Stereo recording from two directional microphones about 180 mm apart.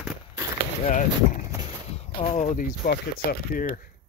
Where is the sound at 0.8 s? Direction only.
45° left (ahead or behind).